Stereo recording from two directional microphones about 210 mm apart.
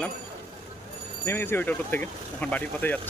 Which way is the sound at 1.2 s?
10° left (ahead or behind).